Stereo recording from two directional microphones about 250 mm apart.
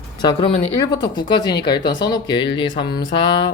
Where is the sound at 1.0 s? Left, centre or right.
Centre.